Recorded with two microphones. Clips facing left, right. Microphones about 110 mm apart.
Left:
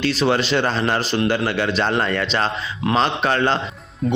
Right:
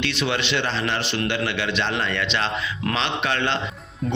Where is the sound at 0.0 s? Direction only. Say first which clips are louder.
Left 6 dB; 40° left (ahead or behind).